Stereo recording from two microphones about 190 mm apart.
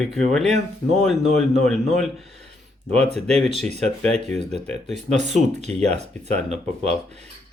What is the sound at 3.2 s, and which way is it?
Speech, 35° right (ahead or behind).